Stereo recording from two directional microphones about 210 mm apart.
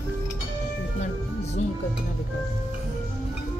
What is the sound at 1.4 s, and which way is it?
Music, 30° left (ahead or behind).